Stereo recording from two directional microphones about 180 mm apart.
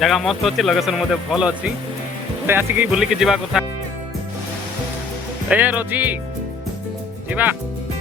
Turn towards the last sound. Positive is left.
turn(degrees=-10)  # may be behind; listen again after turning